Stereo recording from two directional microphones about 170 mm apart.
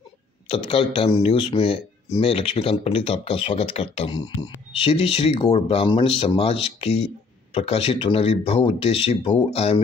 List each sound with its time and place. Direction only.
0.5 s speech: 35° left (ahead or behind)